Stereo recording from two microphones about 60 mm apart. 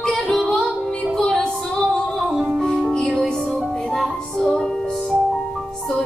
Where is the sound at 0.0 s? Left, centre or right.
Centre.